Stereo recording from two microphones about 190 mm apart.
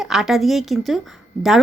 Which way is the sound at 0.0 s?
Centre (ahead or behind).